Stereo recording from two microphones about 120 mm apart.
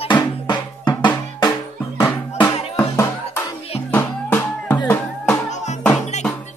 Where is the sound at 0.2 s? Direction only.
40° left (ahead or behind).